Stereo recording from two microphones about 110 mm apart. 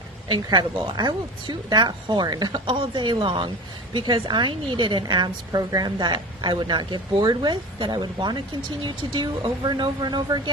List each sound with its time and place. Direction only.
0.3 s a woman's voice: 40° right (ahead or behind)
2.6 s a woman's voice: 50° right (ahead or behind)